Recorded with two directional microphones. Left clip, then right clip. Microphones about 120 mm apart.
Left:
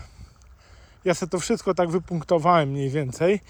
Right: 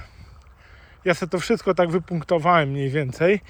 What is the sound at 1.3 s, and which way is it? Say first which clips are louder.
Speech: right 3 dB; 20° left (ahead or behind).